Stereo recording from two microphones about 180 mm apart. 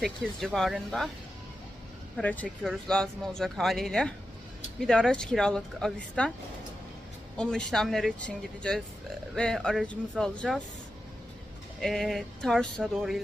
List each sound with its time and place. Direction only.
0.0 s speech: centre (ahead or behind)
2.1 s speech: 10° left (ahead or behind)
7.3 s speech: 5° left (ahead or behind)
11.8 s speech: centre (ahead or behind)